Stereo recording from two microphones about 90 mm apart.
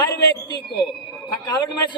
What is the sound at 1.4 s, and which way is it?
Speech, 55° left (ahead or behind).